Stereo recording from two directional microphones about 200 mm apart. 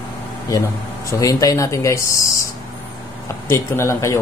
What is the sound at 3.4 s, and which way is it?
Speech, 10° left (ahead or behind).